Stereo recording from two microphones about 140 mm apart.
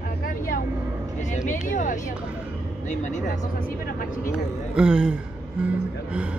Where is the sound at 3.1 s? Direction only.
90° left.